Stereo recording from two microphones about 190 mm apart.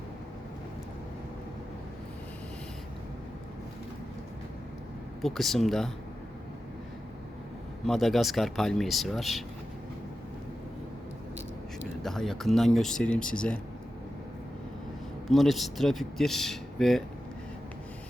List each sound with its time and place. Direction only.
5.2 s speech: centre (ahead or behind)
7.9 s speech: centre (ahead or behind)
12.0 s speech: centre (ahead or behind)
15.3 s speech: centre (ahead or behind)